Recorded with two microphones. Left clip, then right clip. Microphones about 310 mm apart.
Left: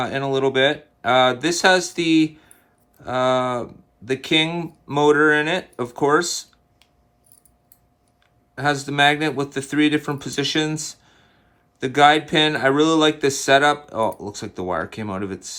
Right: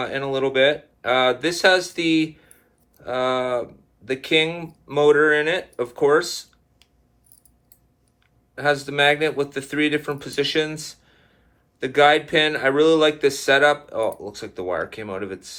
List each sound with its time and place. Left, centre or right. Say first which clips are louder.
0.0 s speech: left 2 dB; left
8.5 s speech: even; left